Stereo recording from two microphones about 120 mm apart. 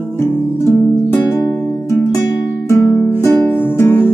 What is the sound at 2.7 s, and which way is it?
Music, 25° left (ahead or behind).